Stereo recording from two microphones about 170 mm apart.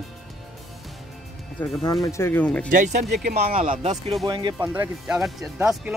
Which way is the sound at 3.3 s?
35° right (ahead or behind).